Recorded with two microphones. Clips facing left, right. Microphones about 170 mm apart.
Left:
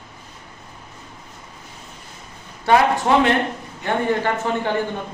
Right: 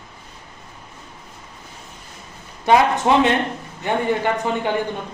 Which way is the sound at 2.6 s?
20° right (ahead or behind).